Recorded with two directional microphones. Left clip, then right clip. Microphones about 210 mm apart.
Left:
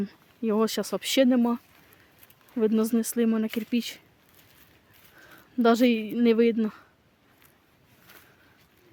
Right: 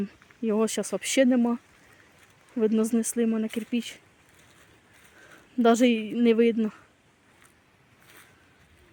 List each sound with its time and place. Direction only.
0.0 s speech: centre (ahead or behind)
5.3 s speech: 5° right (ahead or behind)